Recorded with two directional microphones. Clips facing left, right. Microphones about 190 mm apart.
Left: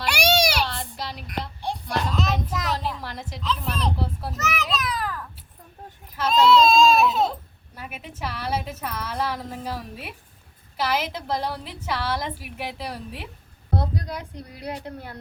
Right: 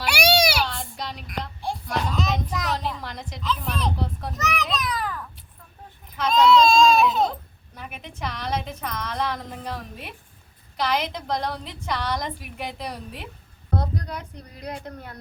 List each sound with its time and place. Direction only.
0.0 s baby cry: 10° right (ahead or behind)
0.6 s a sound: centre (ahead or behind)
6.1 s a woman's voice: centre (ahead or behind)
14.8 s speech: 30° left (ahead or behind)